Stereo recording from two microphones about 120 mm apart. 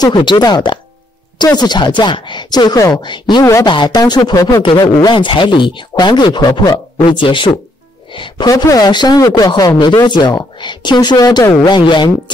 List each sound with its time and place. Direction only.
0.0 s speech: 40° left (ahead or behind)
4.6 s speech: 45° left (ahead or behind)
8.5 s speech: 30° left (ahead or behind)